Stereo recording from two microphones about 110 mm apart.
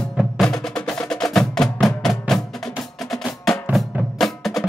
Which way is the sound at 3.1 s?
Centre (ahead or behind).